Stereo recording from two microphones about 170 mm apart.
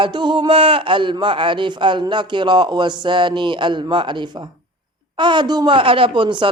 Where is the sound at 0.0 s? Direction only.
25° right (ahead or behind).